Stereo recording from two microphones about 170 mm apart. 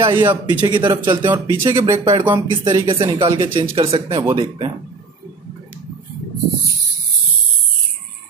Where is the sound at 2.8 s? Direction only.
30° right (ahead or behind).